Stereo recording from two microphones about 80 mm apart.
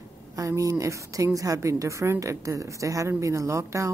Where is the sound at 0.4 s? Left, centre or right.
Right.